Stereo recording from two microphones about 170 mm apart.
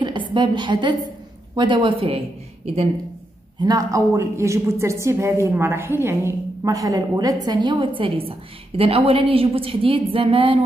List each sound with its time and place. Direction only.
0.0 s a woman's voice: 30° right (ahead or behind)
3.6 s a woman's voice: 20° right (ahead or behind)